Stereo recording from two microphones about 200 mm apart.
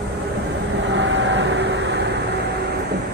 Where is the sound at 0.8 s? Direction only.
65° right (ahead or behind).